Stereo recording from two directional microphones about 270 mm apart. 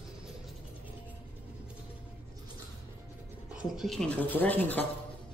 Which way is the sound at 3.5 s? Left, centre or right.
Centre.